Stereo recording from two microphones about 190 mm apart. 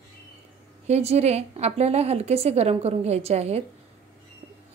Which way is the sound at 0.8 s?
35° right (ahead or behind).